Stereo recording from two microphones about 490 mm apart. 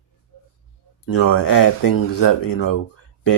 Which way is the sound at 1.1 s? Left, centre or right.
Left.